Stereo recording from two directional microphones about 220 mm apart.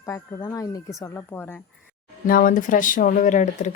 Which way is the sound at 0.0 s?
15° left (ahead or behind).